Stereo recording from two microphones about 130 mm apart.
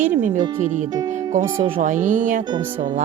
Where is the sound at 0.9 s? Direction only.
30° right (ahead or behind).